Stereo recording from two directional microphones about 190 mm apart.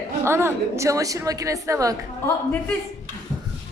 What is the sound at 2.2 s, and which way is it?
Speech, 10° left (ahead or behind).